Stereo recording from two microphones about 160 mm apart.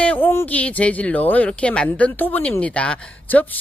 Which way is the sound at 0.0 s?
10° left (ahead or behind).